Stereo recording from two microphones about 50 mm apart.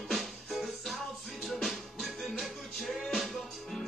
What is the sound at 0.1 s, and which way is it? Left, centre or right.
Music, centre.